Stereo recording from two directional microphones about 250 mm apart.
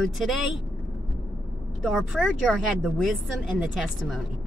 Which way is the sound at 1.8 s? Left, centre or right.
Centre.